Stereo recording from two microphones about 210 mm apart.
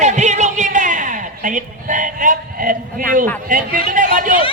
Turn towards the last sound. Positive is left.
turn(degrees=-40)  # may be behind; listen again after turning